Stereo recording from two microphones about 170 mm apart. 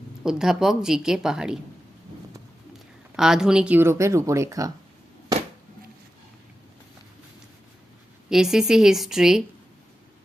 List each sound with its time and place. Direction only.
0.2 s a woman's voice: 5° right (ahead or behind)
3.2 s speech: 5° right (ahead or behind); by 4.7 s 20° right (ahead or behind)
8.3 s a woman's voice: 5° right (ahead or behind)